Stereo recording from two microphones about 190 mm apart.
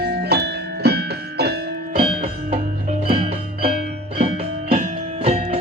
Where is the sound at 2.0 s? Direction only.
30° right (ahead or behind).